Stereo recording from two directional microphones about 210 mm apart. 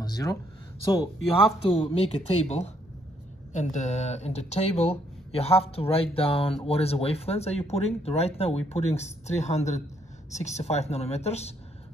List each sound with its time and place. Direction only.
0.0 s speech: 15° left (ahead or behind)
1.6 s speech: 25° left (ahead or behind)